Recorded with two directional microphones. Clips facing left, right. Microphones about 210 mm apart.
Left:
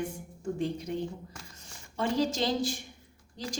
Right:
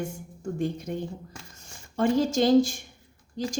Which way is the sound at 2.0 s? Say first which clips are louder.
Right 6 dB; 50° right (ahead or behind).